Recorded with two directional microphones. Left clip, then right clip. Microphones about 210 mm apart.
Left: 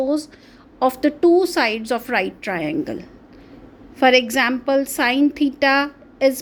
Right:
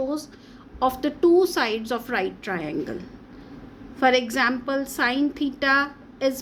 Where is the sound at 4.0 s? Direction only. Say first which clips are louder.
Left 5 dB; 25° left (ahead or behind).